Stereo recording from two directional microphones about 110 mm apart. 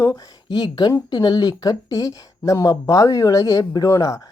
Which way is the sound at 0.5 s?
40° left (ahead or behind).